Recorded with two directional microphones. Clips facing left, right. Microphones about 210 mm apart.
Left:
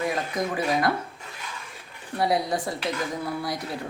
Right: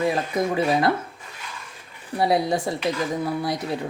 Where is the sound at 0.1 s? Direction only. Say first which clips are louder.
Right 4 dB; 25° right (ahead or behind).